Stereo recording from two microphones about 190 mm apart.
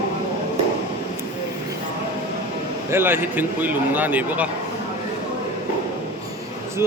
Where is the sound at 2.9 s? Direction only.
10° right (ahead or behind).